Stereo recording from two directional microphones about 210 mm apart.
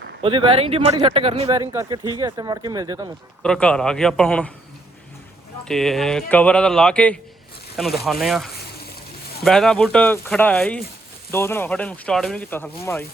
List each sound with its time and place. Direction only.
0.2 s speech: 25° right (ahead or behind)
1.7 s speech: 15° right (ahead or behind)
3.4 s speech: 5° left (ahead or behind)
5.6 s speech: centre (ahead or behind)